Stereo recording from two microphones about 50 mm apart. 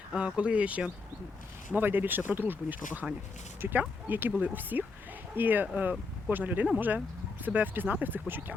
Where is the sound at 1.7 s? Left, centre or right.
Right.